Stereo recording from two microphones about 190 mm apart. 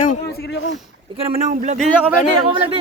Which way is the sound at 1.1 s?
25° right (ahead or behind).